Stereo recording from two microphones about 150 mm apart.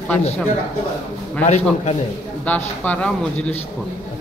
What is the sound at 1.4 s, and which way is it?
Speech, 45° left (ahead or behind).